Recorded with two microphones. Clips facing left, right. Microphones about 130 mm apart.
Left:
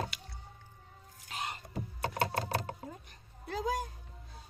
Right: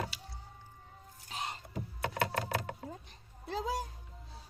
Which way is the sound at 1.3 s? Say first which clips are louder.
Left 1 dB; 25° right (ahead or behind).